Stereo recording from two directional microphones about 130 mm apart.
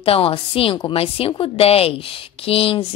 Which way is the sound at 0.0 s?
45° left (ahead or behind).